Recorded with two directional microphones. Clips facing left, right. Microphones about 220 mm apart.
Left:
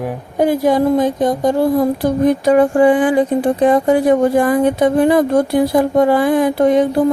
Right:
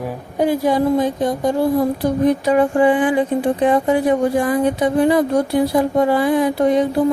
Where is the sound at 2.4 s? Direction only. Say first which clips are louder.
Left 5 dB; 40° left (ahead or behind).